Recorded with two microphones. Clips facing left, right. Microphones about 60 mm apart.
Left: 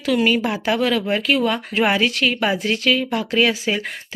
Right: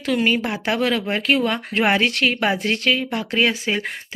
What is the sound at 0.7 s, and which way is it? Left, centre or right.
Speech, right.